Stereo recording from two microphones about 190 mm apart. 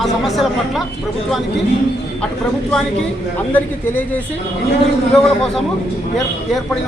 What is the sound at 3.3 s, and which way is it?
A man's voice, 10° left (ahead or behind).